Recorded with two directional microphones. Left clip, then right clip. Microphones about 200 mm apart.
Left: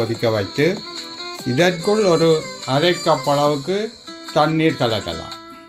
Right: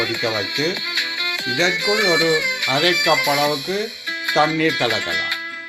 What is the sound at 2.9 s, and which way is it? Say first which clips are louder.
Speech: right 1 dB; 5° right (ahead or behind).